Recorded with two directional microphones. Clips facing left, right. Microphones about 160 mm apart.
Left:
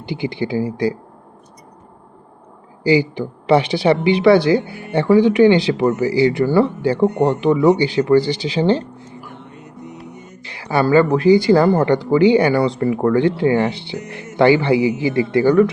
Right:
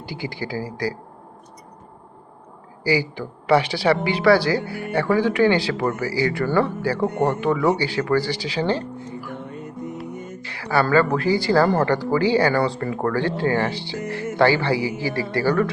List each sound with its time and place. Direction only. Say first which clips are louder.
0.0 s speech: left 7 dB; 20° left (ahead or behind)
2.8 s speech: left 6 dB; 20° left (ahead or behind)
9.0 s music: right 4 dB; 50° right (ahead or behind)
10.4 s speech: left 4 dB; 20° left (ahead or behind)